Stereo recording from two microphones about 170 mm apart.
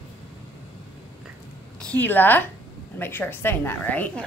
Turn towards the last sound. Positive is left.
turn(degrees=10)  # may be behind; listen again after turning